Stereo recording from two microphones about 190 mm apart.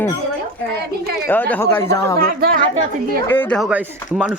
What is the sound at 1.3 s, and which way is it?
Speech, 10° left (ahead or behind).